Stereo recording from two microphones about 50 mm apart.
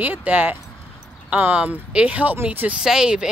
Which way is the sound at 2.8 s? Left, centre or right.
Centre.